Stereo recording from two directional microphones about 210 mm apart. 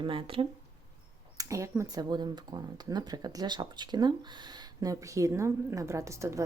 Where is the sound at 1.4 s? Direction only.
15° right (ahead or behind).